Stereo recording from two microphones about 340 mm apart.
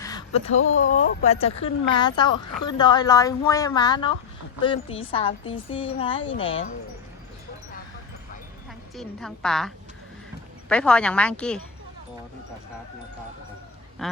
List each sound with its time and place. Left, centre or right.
0.0 s a sound: centre
0.4 s speech: left
1.2 s a woman's voice: centre
9.0 s a woman's voice: centre
14.0 s a woman's voice: centre